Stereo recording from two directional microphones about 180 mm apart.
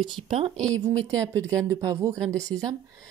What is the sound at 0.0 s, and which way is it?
Speech, 30° right (ahead or behind).